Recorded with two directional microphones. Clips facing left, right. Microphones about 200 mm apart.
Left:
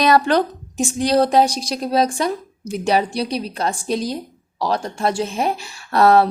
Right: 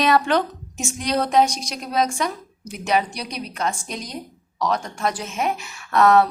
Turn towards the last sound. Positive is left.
turn(degrees=35)  # may be behind; listen again after turning